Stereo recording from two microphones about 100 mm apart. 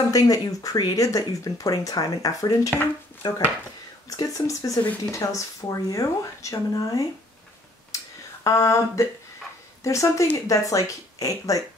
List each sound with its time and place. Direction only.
0.1 s speech: 35° left (ahead or behind)
7.9 s a sound: 30° left (ahead or behind)
8.5 s speech: 30° left (ahead or behind)